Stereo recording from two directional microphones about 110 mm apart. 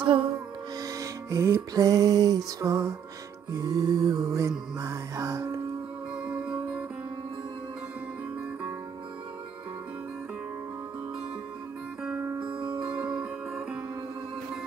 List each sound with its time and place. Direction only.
0.0 s music: 55° right (ahead or behind)
0.8 s music: 30° right (ahead or behind)
6.2 s music: 10° right (ahead or behind)
12.0 s music: 10° right (ahead or behind)